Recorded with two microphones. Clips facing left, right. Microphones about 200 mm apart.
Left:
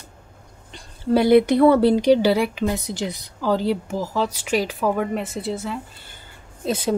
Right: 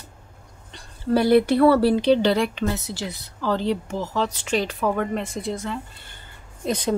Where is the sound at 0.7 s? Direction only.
15° left (ahead or behind).